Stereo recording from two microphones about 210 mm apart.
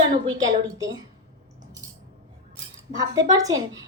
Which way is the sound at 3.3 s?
20° right (ahead or behind).